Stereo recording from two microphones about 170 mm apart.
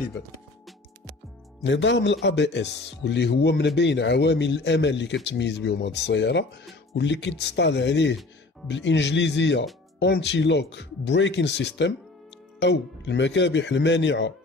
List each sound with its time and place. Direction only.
1.6 s speech: 90° left